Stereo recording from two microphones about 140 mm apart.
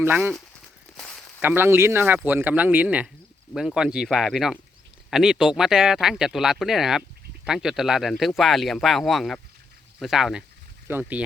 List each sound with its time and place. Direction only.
0.0 s speech: 15° right (ahead or behind)
0.9 s a sound: 5° left (ahead or behind)
1.4 s speech: 15° right (ahead or behind)
10.8 s speech: 15° right (ahead or behind)